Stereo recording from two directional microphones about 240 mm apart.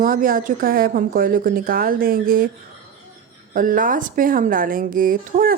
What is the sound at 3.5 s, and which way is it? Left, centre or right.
A woman's voice, right.